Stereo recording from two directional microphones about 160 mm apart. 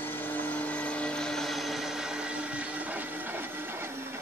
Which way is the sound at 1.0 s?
5° left (ahead or behind).